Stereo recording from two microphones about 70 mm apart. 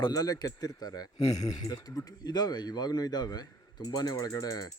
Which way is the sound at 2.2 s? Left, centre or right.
Left.